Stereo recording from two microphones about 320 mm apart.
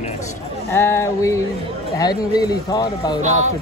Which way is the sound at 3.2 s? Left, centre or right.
Right.